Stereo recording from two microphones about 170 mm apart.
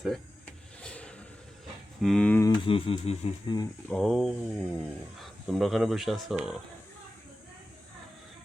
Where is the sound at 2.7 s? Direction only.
30° left (ahead or behind).